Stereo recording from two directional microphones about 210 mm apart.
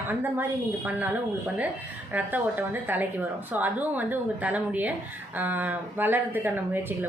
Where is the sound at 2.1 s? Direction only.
10° right (ahead or behind).